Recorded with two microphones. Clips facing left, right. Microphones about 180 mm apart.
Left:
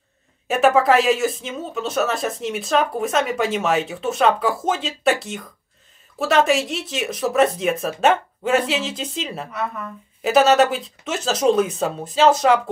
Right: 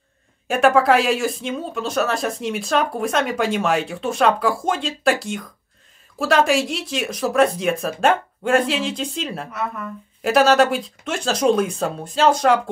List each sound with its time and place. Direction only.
0.5 s speech: centre (ahead or behind)